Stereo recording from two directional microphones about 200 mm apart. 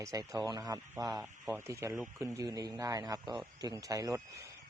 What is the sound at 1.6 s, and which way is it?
Speech, 15° right (ahead or behind).